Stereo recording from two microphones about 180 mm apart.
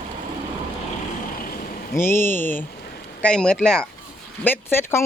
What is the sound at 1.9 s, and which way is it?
Speech, 15° left (ahead or behind).